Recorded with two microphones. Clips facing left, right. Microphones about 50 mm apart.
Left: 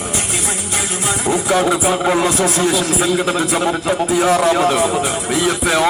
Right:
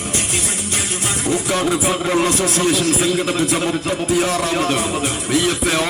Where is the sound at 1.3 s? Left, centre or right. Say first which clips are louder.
Left 3 dB; centre.